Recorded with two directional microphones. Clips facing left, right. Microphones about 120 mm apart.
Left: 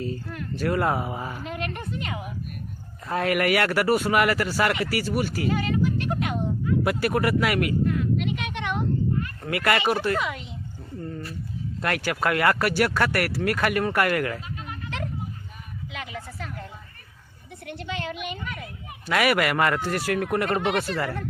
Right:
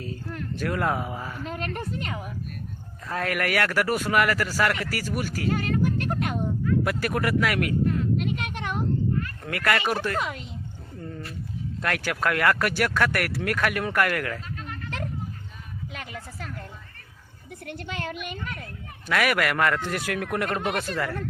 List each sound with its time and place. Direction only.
0.0 s speech: centre (ahead or behind)
1.5 s a woman's voice: 40° right (ahead or behind)
3.1 s speech: 10° left (ahead or behind)
5.5 s music: 50° right (ahead or behind)
6.7 s speech: 5° left (ahead or behind)
7.9 s a sound: 40° right (ahead or behind)
9.1 s speech: 5° left (ahead or behind)
10.2 s a woman's voice: 40° right (ahead or behind)
11.8 s speech: 5° left (ahead or behind)
15.9 s a sound: 45° right (ahead or behind)
17.7 s a woman's voice: 45° right (ahead or behind)
19.0 s speech: 5° left (ahead or behind)